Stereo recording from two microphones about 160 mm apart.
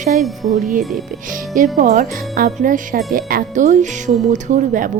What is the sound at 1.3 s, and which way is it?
Speech, 55° right (ahead or behind).